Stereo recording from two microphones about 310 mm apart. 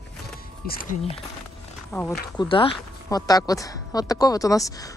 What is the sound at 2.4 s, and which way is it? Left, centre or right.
Speech, centre.